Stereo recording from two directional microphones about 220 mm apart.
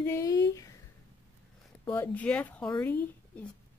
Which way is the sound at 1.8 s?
10° left (ahead or behind).